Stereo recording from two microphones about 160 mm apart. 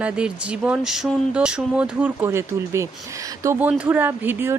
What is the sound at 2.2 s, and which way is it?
Speech, 20° right (ahead or behind).